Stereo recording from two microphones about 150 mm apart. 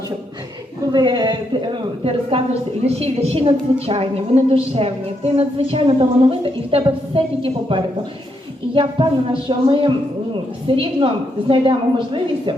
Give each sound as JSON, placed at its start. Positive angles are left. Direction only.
{"t": 0.9, "sound": "a woman's voice", "side_deg": -30}